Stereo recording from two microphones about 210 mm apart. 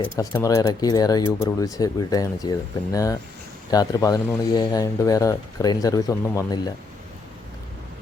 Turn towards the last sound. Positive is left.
turn(degrees=15)  # may be behind; listen again after turning